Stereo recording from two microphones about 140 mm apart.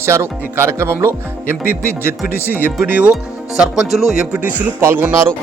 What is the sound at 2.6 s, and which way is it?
Speech, 10° right (ahead or behind).